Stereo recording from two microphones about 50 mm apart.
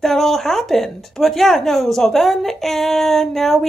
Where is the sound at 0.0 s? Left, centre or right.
Centre.